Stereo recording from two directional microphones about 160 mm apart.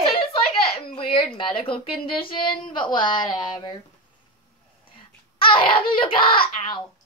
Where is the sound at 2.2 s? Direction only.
30° left (ahead or behind).